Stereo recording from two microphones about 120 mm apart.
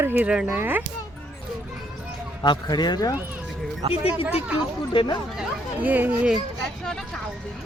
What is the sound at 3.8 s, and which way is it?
Speech, 55° right (ahead or behind).